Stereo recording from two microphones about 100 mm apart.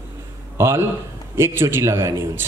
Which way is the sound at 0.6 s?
25° right (ahead or behind).